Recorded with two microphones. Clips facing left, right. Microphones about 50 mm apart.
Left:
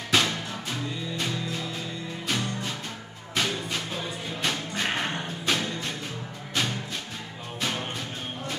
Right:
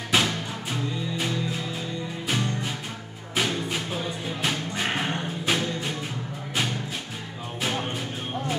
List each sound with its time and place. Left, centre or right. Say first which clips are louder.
0.1 s music: right 1 dB; centre